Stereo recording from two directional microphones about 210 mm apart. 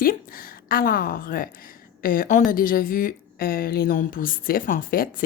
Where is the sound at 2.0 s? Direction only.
40° left (ahead or behind).